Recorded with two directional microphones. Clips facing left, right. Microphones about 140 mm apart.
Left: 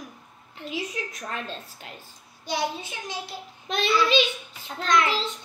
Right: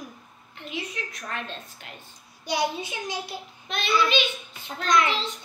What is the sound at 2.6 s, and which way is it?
Speech, centre (ahead or behind).